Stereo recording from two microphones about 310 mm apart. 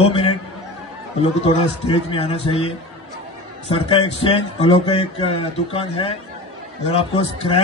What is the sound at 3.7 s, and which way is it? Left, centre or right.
A man's voice, centre.